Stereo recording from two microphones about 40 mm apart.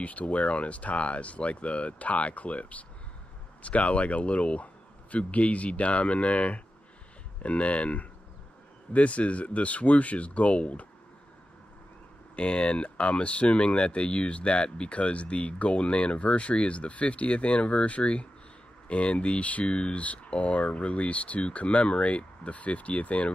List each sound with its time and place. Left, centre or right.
0.0 s speech: left
12.4 s speech: left